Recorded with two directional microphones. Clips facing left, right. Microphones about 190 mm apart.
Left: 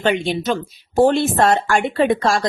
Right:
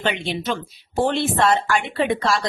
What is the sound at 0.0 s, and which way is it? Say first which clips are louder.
Speech: left 5 dB; 45° left (ahead or behind).